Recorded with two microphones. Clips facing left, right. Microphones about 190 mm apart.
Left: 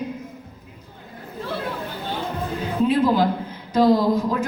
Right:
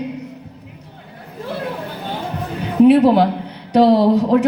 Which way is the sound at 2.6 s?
70° right (ahead or behind).